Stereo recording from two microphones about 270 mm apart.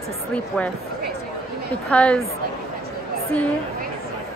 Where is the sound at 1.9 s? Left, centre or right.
Centre.